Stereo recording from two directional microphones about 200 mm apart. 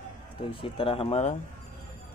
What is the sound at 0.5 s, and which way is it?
Speech, 25° left (ahead or behind).